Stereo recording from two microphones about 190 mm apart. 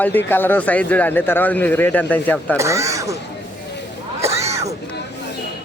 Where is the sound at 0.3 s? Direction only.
10° left (ahead or behind).